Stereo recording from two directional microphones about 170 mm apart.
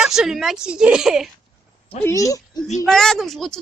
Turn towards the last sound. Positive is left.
turn(degrees=0)  # may be behind; listen again after turning